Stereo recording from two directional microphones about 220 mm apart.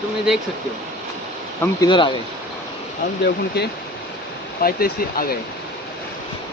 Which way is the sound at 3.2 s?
50° left (ahead or behind).